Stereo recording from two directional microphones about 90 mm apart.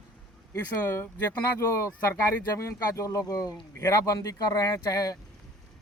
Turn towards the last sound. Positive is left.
turn(degrees=40)  # may be behind; listen again after turning